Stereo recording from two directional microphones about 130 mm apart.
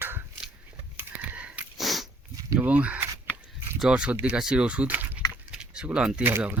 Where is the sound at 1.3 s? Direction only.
10° right (ahead or behind).